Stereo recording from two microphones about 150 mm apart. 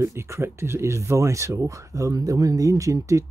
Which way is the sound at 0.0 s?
20° right (ahead or behind).